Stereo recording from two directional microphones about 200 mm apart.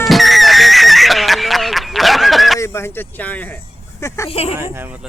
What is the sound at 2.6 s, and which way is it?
Speech, 15° left (ahead or behind).